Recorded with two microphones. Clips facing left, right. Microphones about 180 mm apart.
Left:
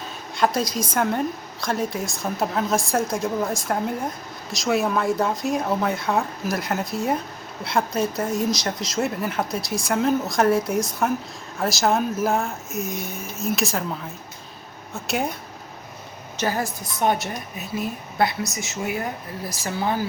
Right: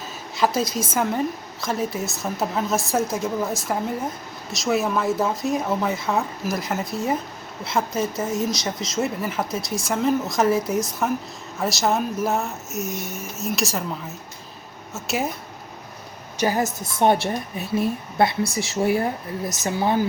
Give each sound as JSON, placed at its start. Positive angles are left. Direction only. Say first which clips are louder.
{"t": 0.3, "sound": "speech", "louder": "even", "side_deg": 0}
{"t": 16.4, "sound": "a woman's voice", "louder": "right 3 dB", "side_deg": -15}